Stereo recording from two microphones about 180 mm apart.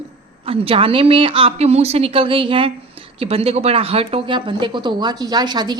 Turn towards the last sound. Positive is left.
turn(degrees=-25)  # may be behind; listen again after turning